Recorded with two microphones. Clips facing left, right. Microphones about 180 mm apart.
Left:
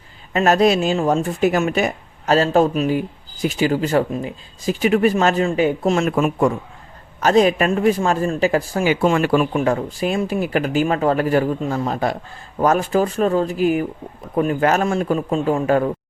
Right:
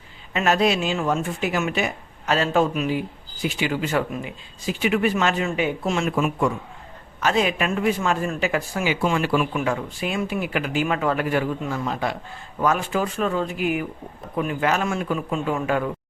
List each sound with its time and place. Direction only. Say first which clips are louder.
0.3 s speech: left 5 dB; 40° left (ahead or behind)